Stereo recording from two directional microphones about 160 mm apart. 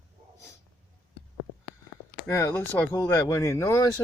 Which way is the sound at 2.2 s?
15° left (ahead or behind).